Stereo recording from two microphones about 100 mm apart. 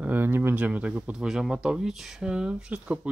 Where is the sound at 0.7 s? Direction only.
15° right (ahead or behind).